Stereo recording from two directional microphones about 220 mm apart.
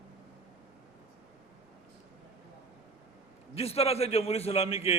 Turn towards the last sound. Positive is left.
turn(degrees=25)  # may be behind; listen again after turning